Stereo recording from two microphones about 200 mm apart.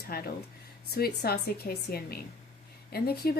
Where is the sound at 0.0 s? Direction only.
50° left (ahead or behind).